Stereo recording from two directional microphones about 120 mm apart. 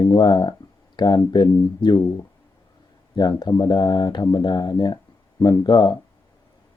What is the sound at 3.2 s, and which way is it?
Speech, 35° left (ahead or behind).